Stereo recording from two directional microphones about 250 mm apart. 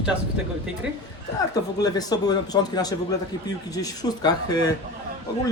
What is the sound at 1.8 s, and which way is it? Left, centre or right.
A man's voice, centre.